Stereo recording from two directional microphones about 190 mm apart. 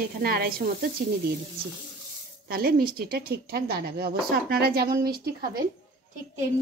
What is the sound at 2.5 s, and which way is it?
A woman's voice, 50° right (ahead or behind).